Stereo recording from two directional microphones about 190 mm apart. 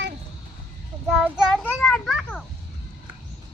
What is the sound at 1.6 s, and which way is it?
Children playing, 5° left (ahead or behind).